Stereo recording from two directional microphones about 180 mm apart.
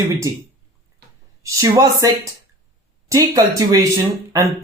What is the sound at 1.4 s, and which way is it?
Speech, 15° right (ahead or behind).